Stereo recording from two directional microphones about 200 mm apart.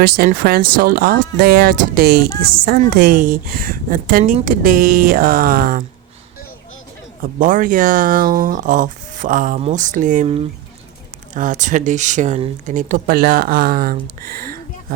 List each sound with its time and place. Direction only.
0.2 s speech: 50° right (ahead or behind)
7.2 s speech: 40° right (ahead or behind)